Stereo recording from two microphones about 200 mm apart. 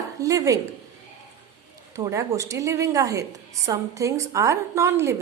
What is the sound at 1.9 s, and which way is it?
A woman's voice, 15° right (ahead or behind).